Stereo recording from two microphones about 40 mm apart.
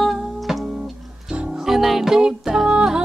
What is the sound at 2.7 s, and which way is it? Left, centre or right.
Music, right.